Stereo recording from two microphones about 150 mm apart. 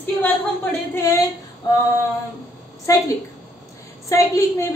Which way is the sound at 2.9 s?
20° left (ahead or behind).